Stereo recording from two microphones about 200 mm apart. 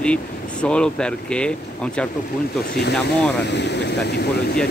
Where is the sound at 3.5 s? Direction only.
60° left (ahead or behind).